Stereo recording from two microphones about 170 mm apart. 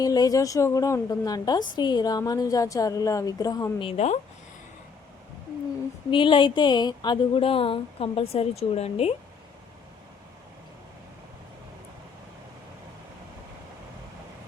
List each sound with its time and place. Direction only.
0.0 s a woman's voice: 20° left (ahead or behind); by 4.2 s 40° left (ahead or behind)
6.1 s speech: 30° left (ahead or behind)